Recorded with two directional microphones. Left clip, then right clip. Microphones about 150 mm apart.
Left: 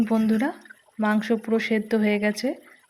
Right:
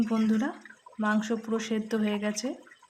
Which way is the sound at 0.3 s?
25° left (ahead or behind).